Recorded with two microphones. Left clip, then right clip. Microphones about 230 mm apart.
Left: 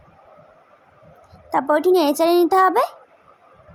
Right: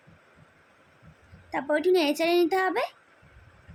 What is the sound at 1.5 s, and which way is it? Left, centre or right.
Speech, centre.